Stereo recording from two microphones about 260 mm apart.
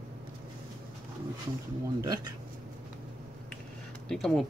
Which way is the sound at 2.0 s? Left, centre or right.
Centre.